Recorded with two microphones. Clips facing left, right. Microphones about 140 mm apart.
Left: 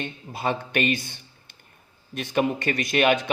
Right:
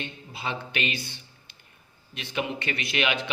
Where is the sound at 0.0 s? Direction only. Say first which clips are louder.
Left 6 dB; 50° left (ahead or behind).